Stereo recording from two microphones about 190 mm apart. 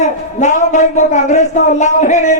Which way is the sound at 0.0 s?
40° left (ahead or behind).